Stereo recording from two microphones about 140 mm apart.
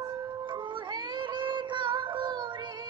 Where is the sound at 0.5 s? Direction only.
35° right (ahead or behind).